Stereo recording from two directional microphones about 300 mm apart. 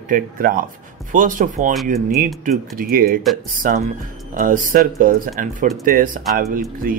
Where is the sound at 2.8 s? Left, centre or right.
Right.